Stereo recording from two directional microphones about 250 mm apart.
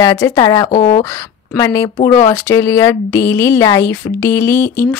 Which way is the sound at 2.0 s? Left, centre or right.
Left.